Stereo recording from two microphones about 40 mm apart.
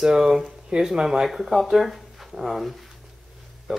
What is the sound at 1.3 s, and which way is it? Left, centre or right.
Speech, centre.